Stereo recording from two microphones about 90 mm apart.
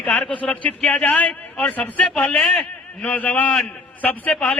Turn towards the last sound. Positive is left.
turn(degrees=15)  # may be behind; listen again after turning